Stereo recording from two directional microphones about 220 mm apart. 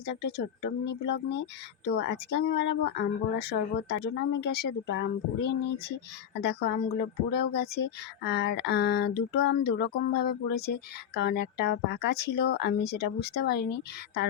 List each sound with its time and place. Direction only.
0.1 s speech: 50° left (ahead or behind)